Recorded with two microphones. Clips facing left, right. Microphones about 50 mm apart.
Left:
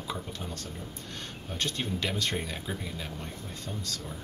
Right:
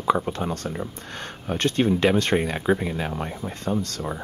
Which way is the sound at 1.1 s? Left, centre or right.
Right.